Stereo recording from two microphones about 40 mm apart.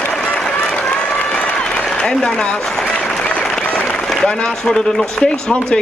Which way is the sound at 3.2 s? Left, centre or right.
Left.